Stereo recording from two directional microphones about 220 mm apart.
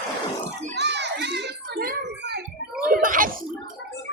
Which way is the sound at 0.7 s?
50° right (ahead or behind).